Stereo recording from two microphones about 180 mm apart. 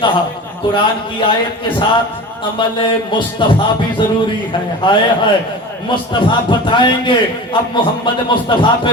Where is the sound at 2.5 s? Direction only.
25° left (ahead or behind).